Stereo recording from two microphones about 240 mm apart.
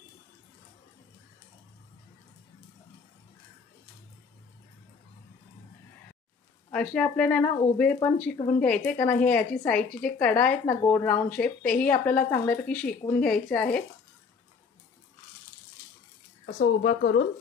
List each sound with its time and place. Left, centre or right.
6.7 s a woman's voice: centre
16.4 s speech: left